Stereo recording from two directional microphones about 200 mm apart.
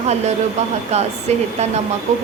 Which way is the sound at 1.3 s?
35° right (ahead or behind).